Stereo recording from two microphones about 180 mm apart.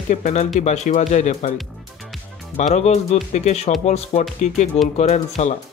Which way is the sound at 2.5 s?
40° left (ahead or behind).